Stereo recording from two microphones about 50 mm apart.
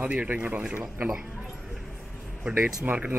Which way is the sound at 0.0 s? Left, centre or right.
Right.